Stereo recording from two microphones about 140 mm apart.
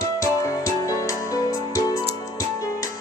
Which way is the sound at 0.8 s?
25° left (ahead or behind).